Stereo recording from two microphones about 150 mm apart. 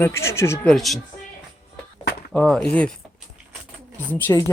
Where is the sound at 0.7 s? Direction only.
Centre (ahead or behind).